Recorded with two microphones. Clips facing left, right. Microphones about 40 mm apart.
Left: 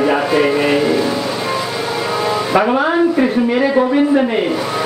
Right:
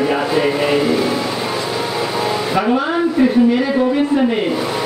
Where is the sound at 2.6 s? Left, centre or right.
Centre.